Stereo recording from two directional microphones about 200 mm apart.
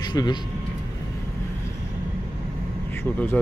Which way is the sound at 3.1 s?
5° left (ahead or behind).